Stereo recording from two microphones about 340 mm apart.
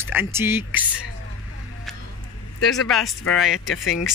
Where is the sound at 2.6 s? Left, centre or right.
Centre.